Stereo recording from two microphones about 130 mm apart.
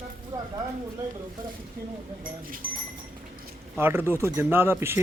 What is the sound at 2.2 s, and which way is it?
Speech, 90° right.